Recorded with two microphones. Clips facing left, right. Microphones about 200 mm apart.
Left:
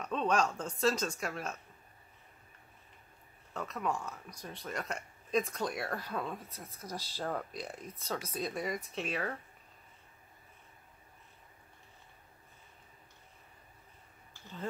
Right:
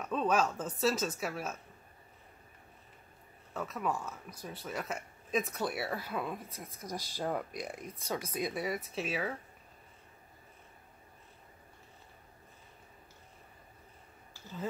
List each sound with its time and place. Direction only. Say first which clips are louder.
0.0 s speech: right 1 dB; 5° right (ahead or behind)
3.5 s speech: right 1 dB; 5° right (ahead or behind)